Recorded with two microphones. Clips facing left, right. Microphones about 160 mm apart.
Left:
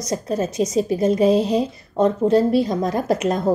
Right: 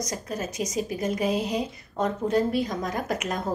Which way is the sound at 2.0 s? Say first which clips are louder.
Left 8 dB; 30° left (ahead or behind).